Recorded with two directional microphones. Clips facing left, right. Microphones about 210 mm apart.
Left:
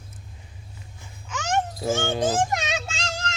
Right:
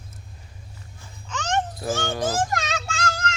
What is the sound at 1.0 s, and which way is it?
Babbling, 10° left (ahead or behind).